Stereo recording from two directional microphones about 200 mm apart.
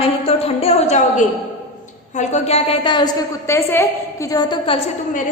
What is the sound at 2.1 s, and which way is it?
A woman's voice, 35° left (ahead or behind).